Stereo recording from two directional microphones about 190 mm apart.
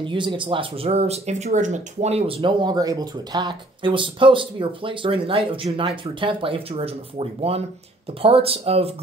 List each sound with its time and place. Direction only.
0.0 s speech: 25° right (ahead or behind)